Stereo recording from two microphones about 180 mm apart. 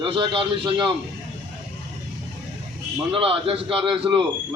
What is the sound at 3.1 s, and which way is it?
A man's voice, 30° right (ahead or behind).